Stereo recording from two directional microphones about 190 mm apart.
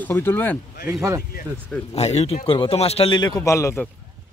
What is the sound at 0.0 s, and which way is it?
Speech, 10° left (ahead or behind).